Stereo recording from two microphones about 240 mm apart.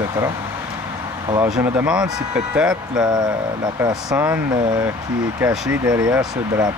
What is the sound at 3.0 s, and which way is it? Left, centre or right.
Speech, centre.